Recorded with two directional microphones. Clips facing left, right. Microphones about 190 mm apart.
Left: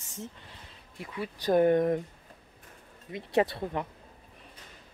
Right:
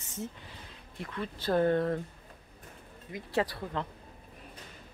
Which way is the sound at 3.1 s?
25° left (ahead or behind).